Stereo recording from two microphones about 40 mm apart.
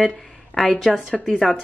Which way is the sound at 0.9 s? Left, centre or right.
Centre.